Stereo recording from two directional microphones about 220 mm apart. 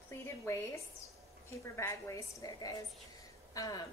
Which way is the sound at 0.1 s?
10° left (ahead or behind).